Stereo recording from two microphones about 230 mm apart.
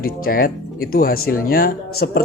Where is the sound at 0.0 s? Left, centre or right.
Left.